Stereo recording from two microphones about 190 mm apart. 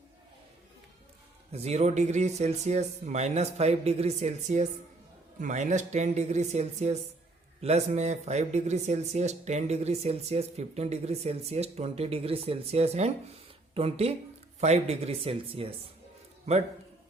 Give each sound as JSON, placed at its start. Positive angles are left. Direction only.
{"t": 1.5, "sound": "speech", "side_deg": -35}